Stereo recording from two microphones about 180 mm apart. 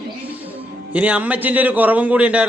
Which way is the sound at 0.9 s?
5° right (ahead or behind).